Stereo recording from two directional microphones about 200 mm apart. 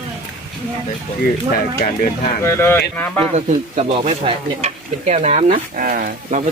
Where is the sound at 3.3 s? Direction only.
35° right (ahead or behind).